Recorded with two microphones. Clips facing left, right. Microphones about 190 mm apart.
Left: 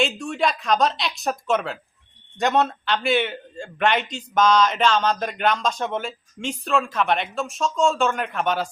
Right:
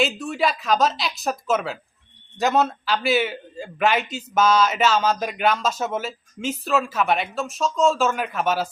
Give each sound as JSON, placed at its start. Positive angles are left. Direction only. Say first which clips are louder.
{"t": 0.0, "sound": "a man's voice", "louder": "even", "side_deg": -5}